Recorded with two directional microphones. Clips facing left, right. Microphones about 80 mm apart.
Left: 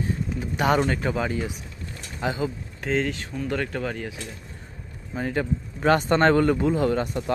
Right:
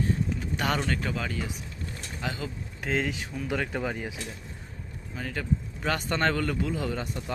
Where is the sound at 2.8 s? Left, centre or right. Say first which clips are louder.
Left 4 dB; centre.